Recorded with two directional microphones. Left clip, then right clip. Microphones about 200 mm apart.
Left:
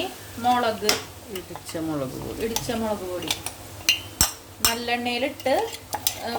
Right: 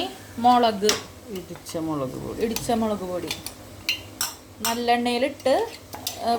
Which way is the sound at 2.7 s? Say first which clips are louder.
Right 5 dB; 25° right (ahead or behind).